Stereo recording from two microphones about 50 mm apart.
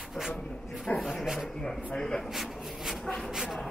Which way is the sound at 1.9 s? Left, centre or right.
Centre.